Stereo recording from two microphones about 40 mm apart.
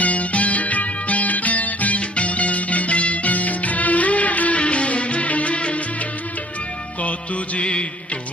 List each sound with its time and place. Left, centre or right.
0.0 s music: left
7.0 s music: left